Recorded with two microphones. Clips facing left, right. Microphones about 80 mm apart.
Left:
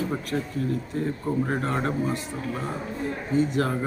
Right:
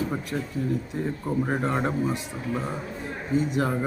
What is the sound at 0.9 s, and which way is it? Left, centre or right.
Speech, centre.